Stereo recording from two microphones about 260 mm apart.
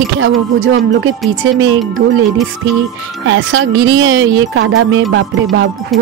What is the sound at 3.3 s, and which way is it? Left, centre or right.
Speech, right.